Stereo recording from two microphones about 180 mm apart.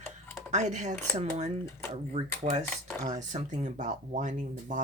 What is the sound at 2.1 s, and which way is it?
Speech, 35° right (ahead or behind).